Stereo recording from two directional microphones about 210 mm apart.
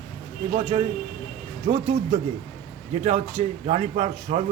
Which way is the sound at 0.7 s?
25° right (ahead or behind).